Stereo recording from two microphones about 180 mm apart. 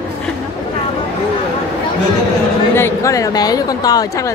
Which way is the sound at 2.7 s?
15° left (ahead or behind).